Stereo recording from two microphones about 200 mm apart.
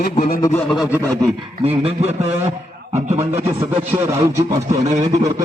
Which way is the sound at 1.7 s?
30° right (ahead or behind).